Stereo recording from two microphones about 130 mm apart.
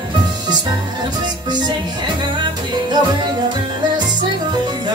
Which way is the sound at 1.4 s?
35° right (ahead or behind).